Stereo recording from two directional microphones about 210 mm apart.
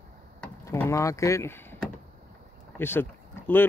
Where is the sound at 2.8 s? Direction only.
10° left (ahead or behind).